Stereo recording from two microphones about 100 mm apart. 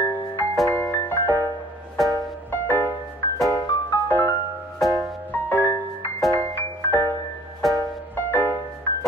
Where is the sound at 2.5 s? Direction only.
25° left (ahead or behind).